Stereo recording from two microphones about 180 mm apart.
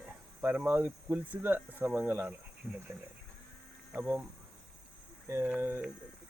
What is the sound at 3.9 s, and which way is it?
Speech, 10° right (ahead or behind).